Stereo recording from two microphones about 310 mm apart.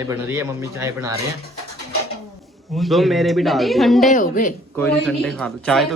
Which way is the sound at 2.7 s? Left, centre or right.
Centre.